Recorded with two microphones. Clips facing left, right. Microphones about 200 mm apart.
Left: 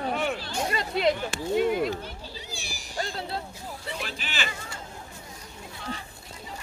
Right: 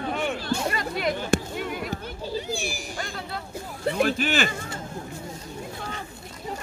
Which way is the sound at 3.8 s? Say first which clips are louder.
Right 15 dB; 50° right (ahead or behind).